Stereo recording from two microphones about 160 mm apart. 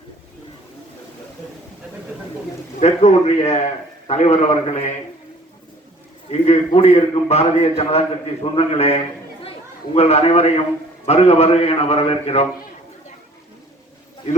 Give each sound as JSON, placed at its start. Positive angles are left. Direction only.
{"t": 2.8, "sound": "a man's voice", "side_deg": 45}
{"t": 6.3, "sound": "a man's voice", "side_deg": 40}